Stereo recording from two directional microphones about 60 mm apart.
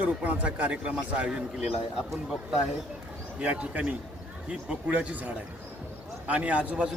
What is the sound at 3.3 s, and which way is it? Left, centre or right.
Speech, centre.